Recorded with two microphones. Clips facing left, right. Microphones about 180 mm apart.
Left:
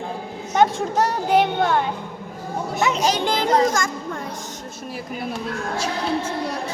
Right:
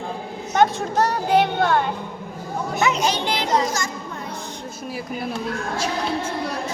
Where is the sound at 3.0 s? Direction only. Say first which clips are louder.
Left 2 dB; 45° left (ahead or behind).